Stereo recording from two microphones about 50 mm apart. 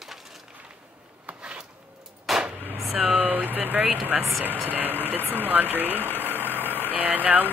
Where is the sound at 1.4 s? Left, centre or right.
Centre.